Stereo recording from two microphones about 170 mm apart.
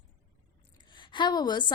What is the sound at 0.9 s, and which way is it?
Speech, 30° left (ahead or behind).